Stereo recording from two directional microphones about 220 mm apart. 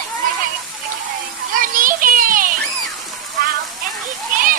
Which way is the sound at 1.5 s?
40° right (ahead or behind).